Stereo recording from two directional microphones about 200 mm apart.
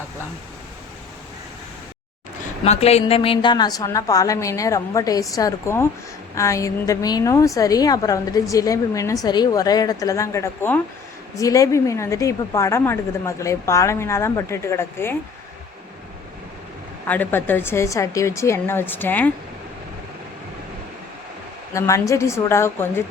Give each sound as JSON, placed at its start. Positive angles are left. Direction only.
{"t": 2.6, "sound": "a woman's voice", "side_deg": 30}
{"t": 17.1, "sound": "a woman's voice", "side_deg": 10}
{"t": 21.7, "sound": "a woman's voice", "side_deg": 15}